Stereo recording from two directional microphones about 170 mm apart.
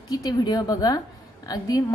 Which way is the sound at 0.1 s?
25° left (ahead or behind).